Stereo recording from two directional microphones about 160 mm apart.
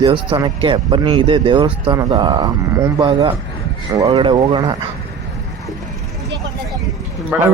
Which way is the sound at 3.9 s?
20° right (ahead or behind).